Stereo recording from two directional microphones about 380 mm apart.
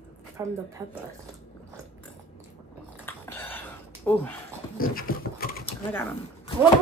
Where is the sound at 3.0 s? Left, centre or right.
Centre.